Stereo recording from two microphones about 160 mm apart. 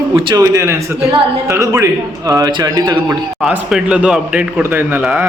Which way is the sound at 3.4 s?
5° right (ahead or behind).